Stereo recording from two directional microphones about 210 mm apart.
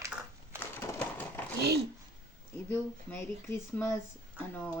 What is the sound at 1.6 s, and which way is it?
Speech, 50° right (ahead or behind).